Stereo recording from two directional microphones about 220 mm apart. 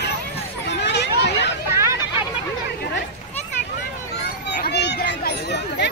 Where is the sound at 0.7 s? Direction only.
50° left (ahead or behind).